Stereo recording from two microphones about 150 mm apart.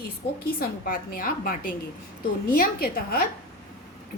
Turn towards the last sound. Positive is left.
turn(degrees=85)